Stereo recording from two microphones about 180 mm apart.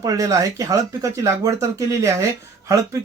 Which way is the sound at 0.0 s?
20° right (ahead or behind).